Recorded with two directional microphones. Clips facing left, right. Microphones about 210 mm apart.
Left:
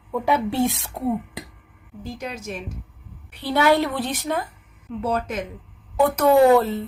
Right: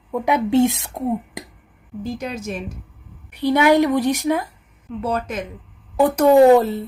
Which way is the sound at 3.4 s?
15° right (ahead or behind).